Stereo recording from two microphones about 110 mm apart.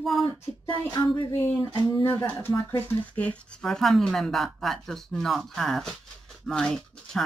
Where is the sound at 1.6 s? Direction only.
45° left (ahead or behind).